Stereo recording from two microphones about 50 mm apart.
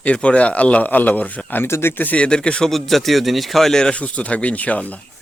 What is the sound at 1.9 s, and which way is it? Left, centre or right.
Speech, left.